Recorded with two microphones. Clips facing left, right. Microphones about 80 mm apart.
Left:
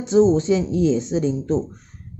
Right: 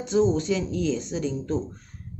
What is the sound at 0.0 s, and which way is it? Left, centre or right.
Speech, left.